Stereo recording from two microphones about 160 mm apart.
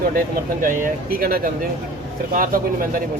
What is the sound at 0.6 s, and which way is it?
Speech, 55° right (ahead or behind).